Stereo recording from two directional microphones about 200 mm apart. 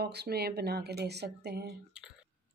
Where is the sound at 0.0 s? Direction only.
55° right (ahead or behind).